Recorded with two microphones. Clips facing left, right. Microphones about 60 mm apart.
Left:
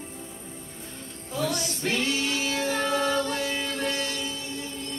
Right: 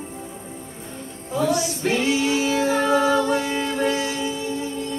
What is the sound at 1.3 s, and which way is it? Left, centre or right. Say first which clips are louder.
Female singing: right 7 dB; centre.